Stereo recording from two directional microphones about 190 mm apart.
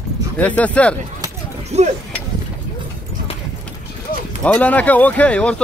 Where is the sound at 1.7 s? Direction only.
35° right (ahead or behind).